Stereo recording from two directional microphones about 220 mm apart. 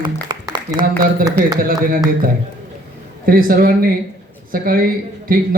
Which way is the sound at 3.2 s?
40° right (ahead or behind).